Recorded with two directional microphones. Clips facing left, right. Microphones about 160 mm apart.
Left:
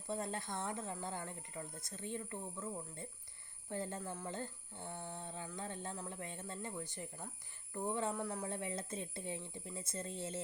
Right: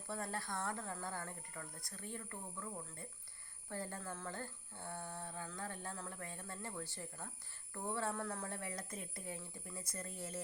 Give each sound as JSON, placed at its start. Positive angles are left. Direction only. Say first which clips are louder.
{"t": 0.1, "sound": "speech", "louder": "left 2 dB", "side_deg": 20}